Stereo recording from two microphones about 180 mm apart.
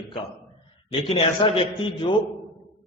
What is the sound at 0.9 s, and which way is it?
A man's voice, 35° left (ahead or behind).